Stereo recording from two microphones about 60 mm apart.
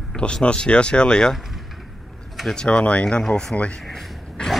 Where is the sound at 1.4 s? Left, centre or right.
Centre.